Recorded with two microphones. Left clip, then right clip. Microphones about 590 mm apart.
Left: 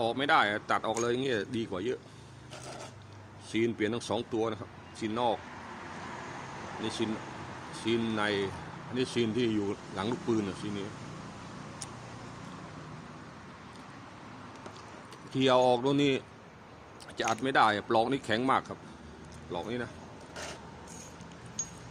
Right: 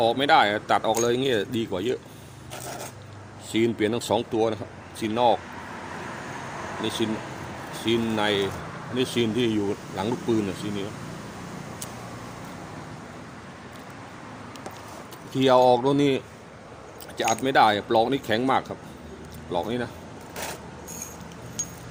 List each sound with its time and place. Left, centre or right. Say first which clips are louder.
0.0 s speech: right 7 dB; left
3.5 s speech: right 7 dB; left
6.8 s speech: right 6 dB; left
15.3 s speech: right 7 dB; left